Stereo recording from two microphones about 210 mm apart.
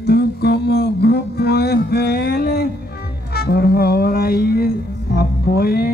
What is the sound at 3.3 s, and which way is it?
Music, 50° left (ahead or behind).